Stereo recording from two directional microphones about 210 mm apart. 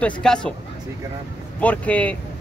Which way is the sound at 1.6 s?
5° left (ahead or behind).